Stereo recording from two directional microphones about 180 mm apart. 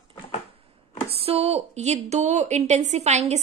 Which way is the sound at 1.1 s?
35° right (ahead or behind).